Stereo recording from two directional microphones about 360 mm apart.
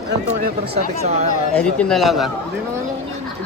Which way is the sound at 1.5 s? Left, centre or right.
Centre.